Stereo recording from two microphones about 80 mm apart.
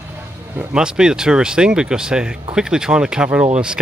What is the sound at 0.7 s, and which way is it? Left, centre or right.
Speech, centre.